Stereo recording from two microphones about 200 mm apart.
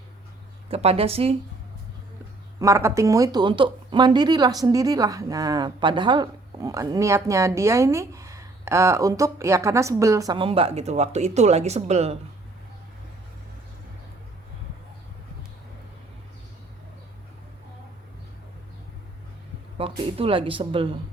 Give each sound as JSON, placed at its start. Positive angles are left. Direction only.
{"t": 0.7, "sound": "speech", "side_deg": -30}
{"t": 2.6, "sound": "speech", "side_deg": -15}
{"t": 19.8, "sound": "speech", "side_deg": -30}